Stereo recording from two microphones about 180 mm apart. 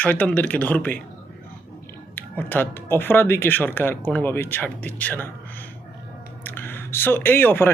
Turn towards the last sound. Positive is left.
turn(degrees=10)  # may be behind; listen again after turning